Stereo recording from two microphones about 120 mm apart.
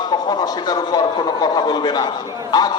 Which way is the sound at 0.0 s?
35° left (ahead or behind).